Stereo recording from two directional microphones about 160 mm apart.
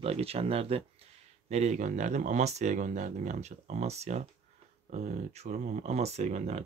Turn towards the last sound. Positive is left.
turn(degrees=-45)  # may be behind; listen again after turning